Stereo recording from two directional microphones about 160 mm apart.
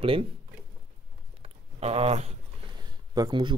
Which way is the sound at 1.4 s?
40° right (ahead or behind).